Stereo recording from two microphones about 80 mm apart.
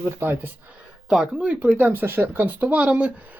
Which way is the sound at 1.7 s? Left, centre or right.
Right.